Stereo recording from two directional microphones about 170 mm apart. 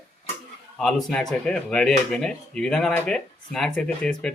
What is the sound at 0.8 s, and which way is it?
Speech, centre (ahead or behind).